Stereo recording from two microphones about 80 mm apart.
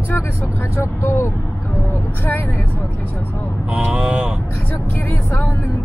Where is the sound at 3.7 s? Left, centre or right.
Centre.